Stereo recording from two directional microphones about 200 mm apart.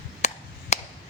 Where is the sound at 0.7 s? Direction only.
30° left (ahead or behind).